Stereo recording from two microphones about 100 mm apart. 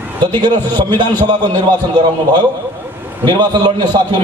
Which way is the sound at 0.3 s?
50° right (ahead or behind).